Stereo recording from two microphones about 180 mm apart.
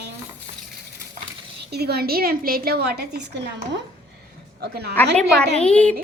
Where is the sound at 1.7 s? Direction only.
65° right (ahead or behind).